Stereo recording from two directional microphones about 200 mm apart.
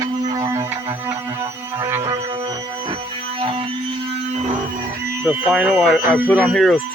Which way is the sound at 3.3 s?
25° right (ahead or behind).